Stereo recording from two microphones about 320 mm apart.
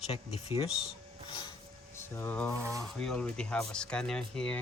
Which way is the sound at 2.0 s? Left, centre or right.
Centre.